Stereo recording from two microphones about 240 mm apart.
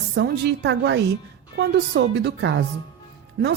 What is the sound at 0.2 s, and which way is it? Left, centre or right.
A woman's voice, right.